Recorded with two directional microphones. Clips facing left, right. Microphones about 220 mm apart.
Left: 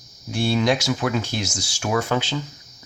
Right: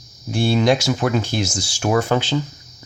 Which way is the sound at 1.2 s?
30° right (ahead or behind).